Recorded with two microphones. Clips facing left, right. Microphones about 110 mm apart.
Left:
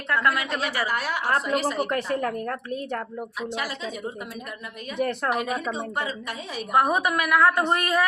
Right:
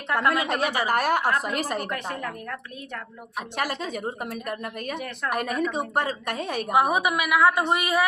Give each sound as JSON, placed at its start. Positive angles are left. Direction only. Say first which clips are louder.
{"t": 0.1, "sound": "a woman's voice", "louder": "right 1 dB", "side_deg": -20}
{"t": 0.4, "sound": "a woman's voice", "louder": "right 3 dB", "side_deg": -50}
{"t": 2.2, "sound": "a woman's voice", "louder": "left 6 dB", "side_deg": 40}
{"t": 3.6, "sound": "a woman's voice", "louder": "right 3 dB", "side_deg": -50}
{"t": 4.9, "sound": "speech", "louder": "left 6 dB", "side_deg": 40}
{"t": 5.3, "sound": "a woman's voice", "louder": "even", "side_deg": -50}
{"t": 6.7, "sound": "a woman's voice", "louder": "left 1 dB", "side_deg": -10}